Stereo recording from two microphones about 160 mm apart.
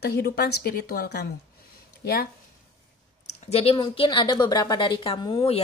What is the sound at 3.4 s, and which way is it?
Speech, 40° left (ahead or behind).